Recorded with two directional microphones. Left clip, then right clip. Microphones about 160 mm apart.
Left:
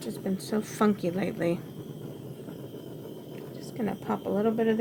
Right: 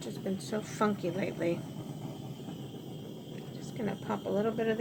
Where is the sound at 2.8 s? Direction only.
10° left (ahead or behind).